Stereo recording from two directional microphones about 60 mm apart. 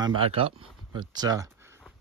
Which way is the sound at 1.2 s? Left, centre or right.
Right.